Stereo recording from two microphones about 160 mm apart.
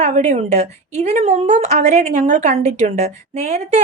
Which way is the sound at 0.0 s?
45° right (ahead or behind).